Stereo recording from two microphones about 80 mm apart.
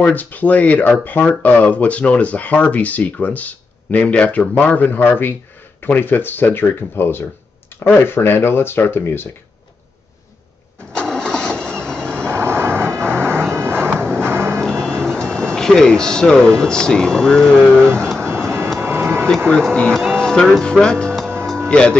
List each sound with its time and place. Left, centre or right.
0.0 s speech: left
7.7 s a sound: left
8.1 s speech: left
10.9 s vehicle: centre
12.3 s vehicle: right
13.9 s music: centre
14.2 s music: right
14.6 s speech: centre
18.0 s vehicle: centre
18.8 s a sound: right
19.5 s speech: centre